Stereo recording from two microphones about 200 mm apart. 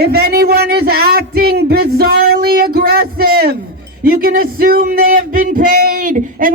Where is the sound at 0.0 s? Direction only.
50° right (ahead or behind).